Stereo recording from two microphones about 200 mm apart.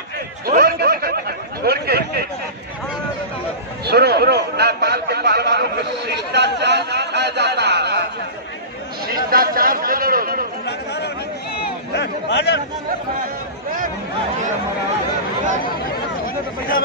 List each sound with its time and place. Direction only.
0.5 s snicker: 50° right (ahead or behind)
3.8 s a man's voice: 55° right (ahead or behind)
9.0 s a man's voice: 45° right (ahead or behind)
10.6 s speech: 55° left (ahead or behind)